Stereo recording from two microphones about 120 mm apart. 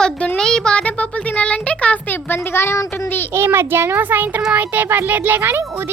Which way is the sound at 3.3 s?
20° right (ahead or behind).